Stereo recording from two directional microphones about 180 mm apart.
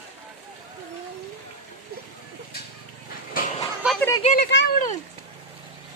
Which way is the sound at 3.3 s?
50° left (ahead or behind).